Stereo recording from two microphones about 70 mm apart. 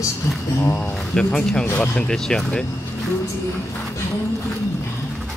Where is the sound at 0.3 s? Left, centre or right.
Left.